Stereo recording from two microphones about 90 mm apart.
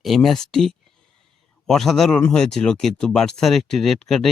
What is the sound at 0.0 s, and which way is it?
Speech, centre (ahead or behind).